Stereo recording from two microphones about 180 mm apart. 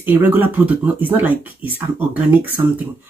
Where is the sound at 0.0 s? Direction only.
10° right (ahead or behind).